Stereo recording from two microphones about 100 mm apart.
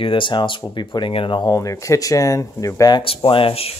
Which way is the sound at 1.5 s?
30° left (ahead or behind).